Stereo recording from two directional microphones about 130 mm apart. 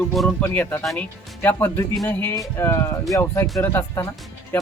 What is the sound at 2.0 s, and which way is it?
Speech, 20° left (ahead or behind).